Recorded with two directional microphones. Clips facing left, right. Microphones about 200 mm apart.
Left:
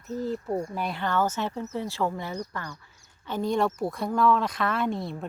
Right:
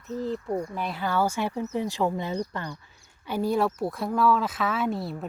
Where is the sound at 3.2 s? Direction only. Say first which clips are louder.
Right 1 dB; 10° right (ahead or behind).